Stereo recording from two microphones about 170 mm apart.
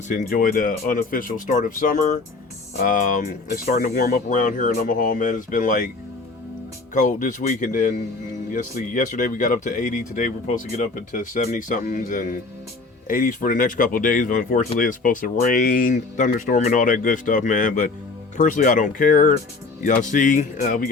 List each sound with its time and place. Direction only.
0.1 s speech: 55° left (ahead or behind)
6.9 s speech: 50° left (ahead or behind)